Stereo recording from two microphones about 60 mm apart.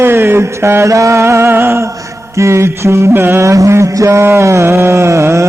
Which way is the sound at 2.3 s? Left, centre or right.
Right.